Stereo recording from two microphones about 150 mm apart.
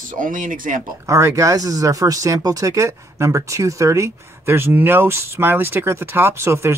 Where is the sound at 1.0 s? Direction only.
20° right (ahead or behind).